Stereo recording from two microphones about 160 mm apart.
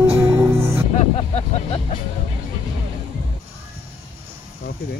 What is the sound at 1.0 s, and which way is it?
Vehicle, 45° left (ahead or behind).